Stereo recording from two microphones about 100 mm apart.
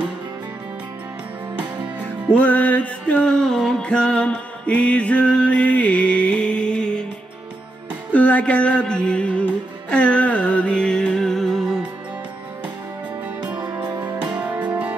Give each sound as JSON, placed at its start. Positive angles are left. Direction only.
{"t": 2.3, "sound": "music", "side_deg": 15}
{"t": 8.1, "sound": "music", "side_deg": 15}
{"t": 13.6, "sound": "music", "side_deg": -45}
{"t": 14.1, "sound": "music", "side_deg": -10}